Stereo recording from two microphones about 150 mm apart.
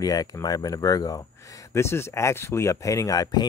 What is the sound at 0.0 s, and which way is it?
Speech, 25° left (ahead or behind).